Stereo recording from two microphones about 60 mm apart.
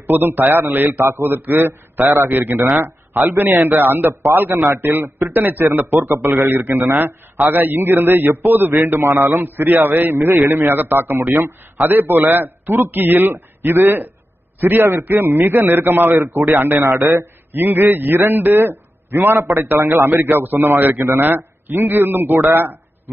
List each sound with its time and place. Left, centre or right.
0.1 s a man's voice: right
16.8 s a man's voice: right
17.5 s a man's voice: right
20.2 s a man's voice: right